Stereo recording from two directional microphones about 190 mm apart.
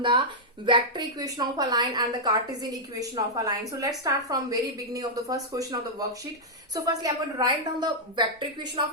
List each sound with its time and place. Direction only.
0.0 s a woman's voice: 25° right (ahead or behind)